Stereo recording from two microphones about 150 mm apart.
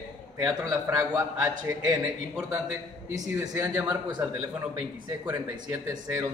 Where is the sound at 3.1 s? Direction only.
25° right (ahead or behind).